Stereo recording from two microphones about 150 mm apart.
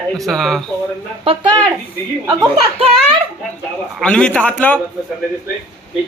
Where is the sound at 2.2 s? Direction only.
15° right (ahead or behind).